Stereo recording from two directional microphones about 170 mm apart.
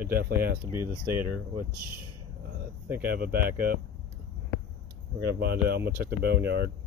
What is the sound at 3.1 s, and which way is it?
Speech, 60° right (ahead or behind).